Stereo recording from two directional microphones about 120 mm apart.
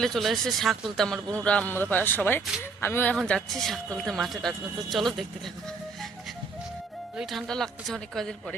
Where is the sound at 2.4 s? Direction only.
5° right (ahead or behind).